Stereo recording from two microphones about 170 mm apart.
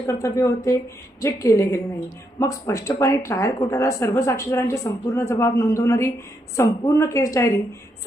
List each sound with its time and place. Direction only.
0.1 s speech: 15° left (ahead or behind)